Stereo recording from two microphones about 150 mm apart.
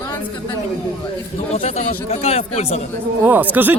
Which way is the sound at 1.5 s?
45° left (ahead or behind).